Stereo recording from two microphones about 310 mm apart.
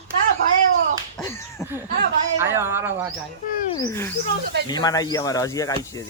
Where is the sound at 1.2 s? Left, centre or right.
Centre.